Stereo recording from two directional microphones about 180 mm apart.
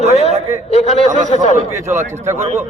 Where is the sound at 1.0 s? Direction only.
40° right (ahead or behind).